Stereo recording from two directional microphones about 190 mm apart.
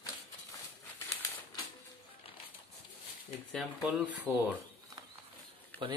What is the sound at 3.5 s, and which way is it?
Speech, centre (ahead or behind).